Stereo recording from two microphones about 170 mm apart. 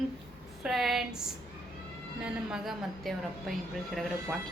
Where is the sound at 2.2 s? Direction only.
5° right (ahead or behind).